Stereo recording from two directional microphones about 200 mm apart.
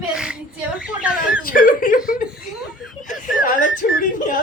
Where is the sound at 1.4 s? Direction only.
45° left (ahead or behind).